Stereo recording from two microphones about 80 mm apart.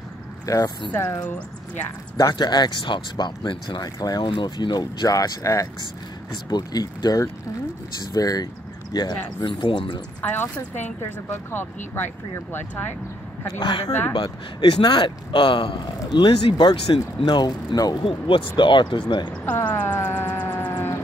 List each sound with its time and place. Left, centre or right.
0.5 s speech: left
2.3 s speech: left
4.2 s speech: left
6.3 s speech: left
8.9 s speech: left
10.2 s speech: left
13.6 s speech: left
16.1 s speech: left
17.2 s speech: left
19.4 s speech: centre
19.9 s music: left